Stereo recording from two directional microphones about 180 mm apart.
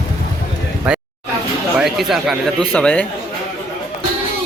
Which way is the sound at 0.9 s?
5° right (ahead or behind).